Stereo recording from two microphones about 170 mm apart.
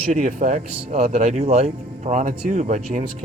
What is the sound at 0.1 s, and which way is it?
Speech, 50° right (ahead or behind).